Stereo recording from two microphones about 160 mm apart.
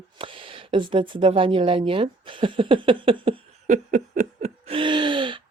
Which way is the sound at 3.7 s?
50° right (ahead or behind).